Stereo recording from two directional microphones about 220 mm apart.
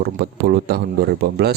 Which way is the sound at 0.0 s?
45° right (ahead or behind).